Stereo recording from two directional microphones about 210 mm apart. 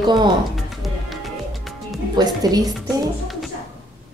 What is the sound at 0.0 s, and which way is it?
Speech, 20° right (ahead or behind).